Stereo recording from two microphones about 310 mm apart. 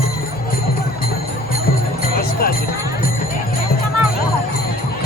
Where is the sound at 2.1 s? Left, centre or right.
Left.